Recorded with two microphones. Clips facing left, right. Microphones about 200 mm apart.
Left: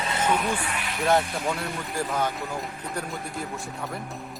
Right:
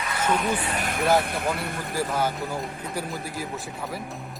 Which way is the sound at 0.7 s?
50° right (ahead or behind).